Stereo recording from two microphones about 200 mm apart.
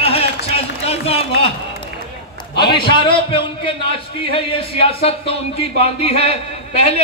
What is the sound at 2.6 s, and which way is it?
A man's voice, 25° left (ahead or behind).